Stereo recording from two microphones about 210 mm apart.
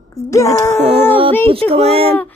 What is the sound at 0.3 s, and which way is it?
Speech, 15° left (ahead or behind).